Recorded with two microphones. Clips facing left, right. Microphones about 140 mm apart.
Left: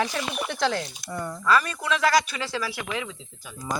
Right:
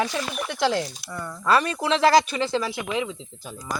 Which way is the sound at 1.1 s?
15° left (ahead or behind).